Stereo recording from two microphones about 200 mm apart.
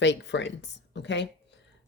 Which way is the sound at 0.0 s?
60° left (ahead or behind).